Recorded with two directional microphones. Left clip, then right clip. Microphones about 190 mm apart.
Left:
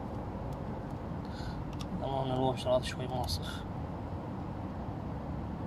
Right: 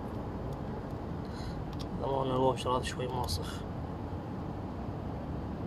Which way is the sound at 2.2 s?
35° left (ahead or behind).